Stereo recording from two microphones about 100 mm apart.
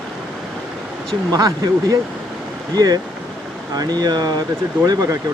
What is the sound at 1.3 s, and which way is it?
Speech, 40° right (ahead or behind).